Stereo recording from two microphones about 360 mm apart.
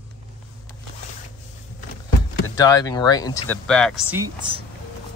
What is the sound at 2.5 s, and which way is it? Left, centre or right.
Speech, centre.